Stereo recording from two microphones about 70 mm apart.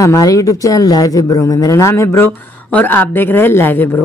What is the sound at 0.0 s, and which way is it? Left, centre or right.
Speech, left.